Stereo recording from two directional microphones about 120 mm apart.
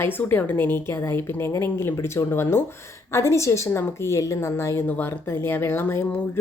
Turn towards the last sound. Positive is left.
turn(degrees=20)  # may be behind; listen again after turning